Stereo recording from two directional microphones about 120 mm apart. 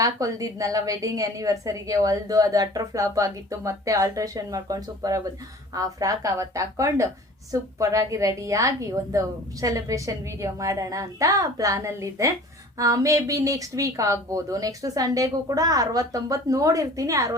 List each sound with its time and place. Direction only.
0.0 s a woman's voice: 30° right (ahead or behind)